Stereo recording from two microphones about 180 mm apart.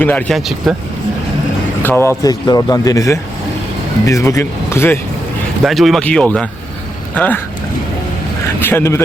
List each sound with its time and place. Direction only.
0.0 s speech: 10° left (ahead or behind)
1.8 s speech: 15° left (ahead or behind)
5.6 s speech: centre (ahead or behind)
8.6 s speech: 15° left (ahead or behind)